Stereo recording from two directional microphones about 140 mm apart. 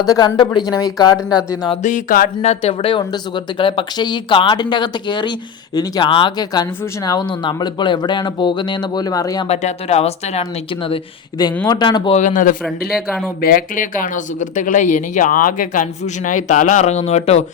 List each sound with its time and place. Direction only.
0.0 s speech: 30° left (ahead or behind)
1.8 s a sound: 75° left (ahead or behind)
2.4 s speech: 50° left (ahead or behind); by 9.5 s 25° left (ahead or behind)
9.5 s speech: 50° left (ahead or behind)
10.8 s speech: 35° left (ahead or behind)
12.1 s speech: 65° left (ahead or behind)
13.4 s a man's voice: 85° left; by 17.4 s 50° left (ahead or behind)